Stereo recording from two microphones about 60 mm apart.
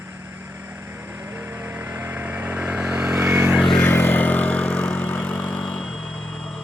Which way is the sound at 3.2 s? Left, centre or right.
Right.